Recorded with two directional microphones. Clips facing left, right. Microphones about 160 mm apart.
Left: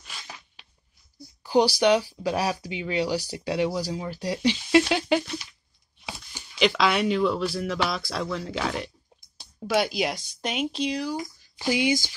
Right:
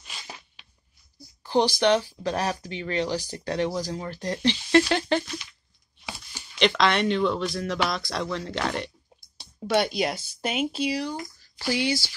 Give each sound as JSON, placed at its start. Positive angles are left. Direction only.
{"t": 1.4, "sound": "speech", "side_deg": 10}
{"t": 11.1, "sound": "speech", "side_deg": 15}